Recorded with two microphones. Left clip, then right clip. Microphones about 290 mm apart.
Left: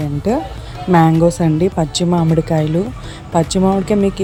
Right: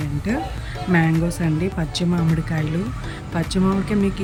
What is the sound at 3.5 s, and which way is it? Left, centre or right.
Music, centre.